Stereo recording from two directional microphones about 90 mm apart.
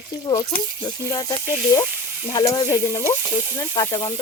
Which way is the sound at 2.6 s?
45° left (ahead or behind).